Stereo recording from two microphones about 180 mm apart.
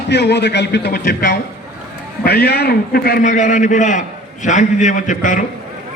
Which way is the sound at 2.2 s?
65° left (ahead or behind).